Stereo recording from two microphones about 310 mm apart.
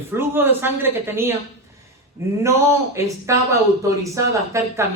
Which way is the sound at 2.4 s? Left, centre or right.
Centre.